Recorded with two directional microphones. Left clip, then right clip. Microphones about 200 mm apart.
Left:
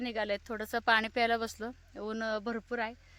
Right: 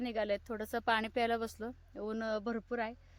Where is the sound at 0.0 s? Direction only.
10° left (ahead or behind).